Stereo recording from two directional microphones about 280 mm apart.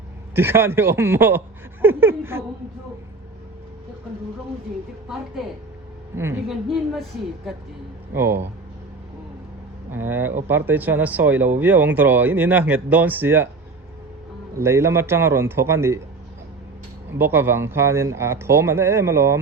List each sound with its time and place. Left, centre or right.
0.3 s speech: centre
1.8 s a sound: centre
6.1 s a woman's voice: centre
8.1 s speech: centre
9.9 s speech: centre
14.6 s speech: centre
17.1 s speech: centre